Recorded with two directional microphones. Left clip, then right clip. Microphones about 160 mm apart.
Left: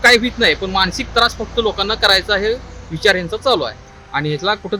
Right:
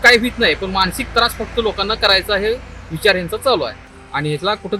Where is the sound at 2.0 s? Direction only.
35° left (ahead or behind).